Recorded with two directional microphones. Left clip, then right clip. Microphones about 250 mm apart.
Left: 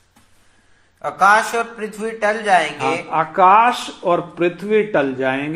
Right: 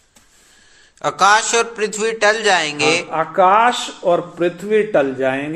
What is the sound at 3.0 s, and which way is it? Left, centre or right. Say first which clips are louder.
A man's voice: left 5 dB; centre.